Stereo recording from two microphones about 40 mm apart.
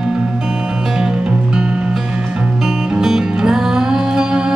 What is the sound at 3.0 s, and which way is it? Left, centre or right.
Music, centre.